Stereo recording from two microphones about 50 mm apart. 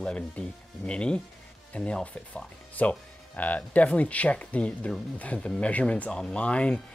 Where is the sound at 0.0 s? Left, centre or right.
Left.